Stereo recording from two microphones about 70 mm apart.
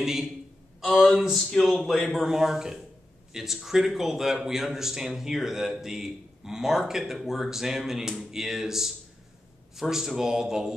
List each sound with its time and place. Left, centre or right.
0.0 s a man's voice: centre